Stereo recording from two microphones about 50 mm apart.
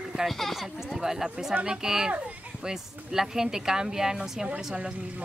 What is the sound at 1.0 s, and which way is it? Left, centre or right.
Speech, centre.